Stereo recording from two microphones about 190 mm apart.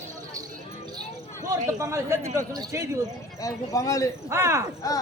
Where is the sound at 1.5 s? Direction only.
15° right (ahead or behind).